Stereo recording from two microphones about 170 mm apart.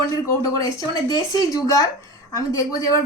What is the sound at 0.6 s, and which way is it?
Speech, 20° left (ahead or behind).